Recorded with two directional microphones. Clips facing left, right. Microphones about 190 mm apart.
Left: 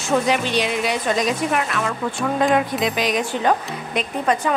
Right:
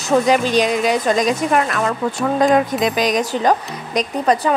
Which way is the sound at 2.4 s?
40° right (ahead or behind).